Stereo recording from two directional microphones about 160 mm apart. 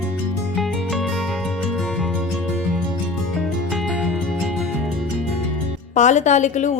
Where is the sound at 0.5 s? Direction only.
Centre (ahead or behind).